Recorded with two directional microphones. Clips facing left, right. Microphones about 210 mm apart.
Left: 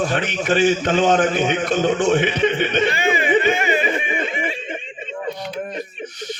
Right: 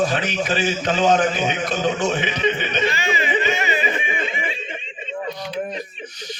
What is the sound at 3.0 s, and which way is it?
Snicker, 50° left (ahead or behind).